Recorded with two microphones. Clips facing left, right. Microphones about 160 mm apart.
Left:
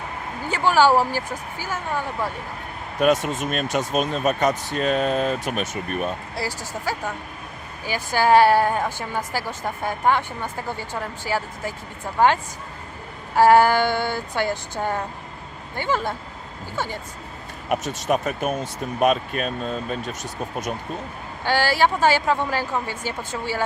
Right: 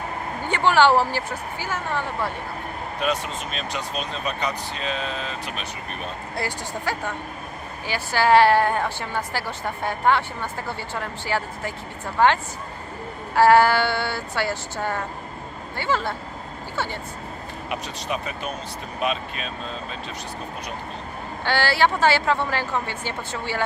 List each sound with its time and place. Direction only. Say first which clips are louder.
0.5 s a woman's voice: even; 10° left (ahead or behind)
3.0 s speech: left 7 dB; 50° left (ahead or behind)
6.3 s a woman's voice: even; 5° left (ahead or behind)
17.7 s speech: left 7 dB; 45° left (ahead or behind)
21.4 s a woman's voice: left 1 dB; 10° left (ahead or behind)